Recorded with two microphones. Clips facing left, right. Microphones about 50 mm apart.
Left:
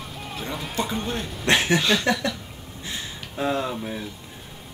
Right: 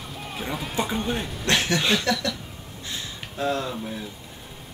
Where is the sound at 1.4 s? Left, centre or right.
Centre.